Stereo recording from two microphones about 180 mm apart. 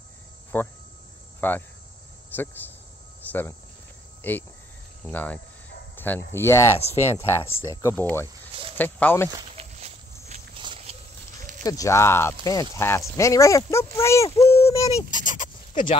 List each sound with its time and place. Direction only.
0.5 s speech: 10° left (ahead or behind)
1.4 s cricket: 10° left (ahead or behind)
2.3 s speech: 10° left (ahead or behind)
3.2 s cricket: 10° left (ahead or behind)
4.2 s speech: 10° left (ahead or behind)
9.6 s walk: 35° right (ahead or behind)
10.6 s a sound: 25° right (ahead or behind)
11.3 s a sound: 45° right (ahead or behind)
11.6 s speech: 20° left (ahead or behind)
15.0 s a sound: 45° left (ahead or behind)